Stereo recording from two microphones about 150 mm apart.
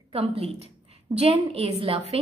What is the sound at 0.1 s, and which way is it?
A woman's voice, 40° right (ahead or behind).